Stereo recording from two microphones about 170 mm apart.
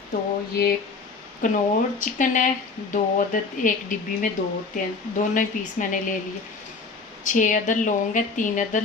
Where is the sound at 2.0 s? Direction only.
50° left (ahead or behind).